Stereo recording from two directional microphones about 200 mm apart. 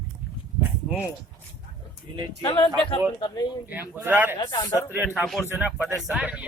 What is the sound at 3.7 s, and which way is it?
Speech, 10° right (ahead or behind).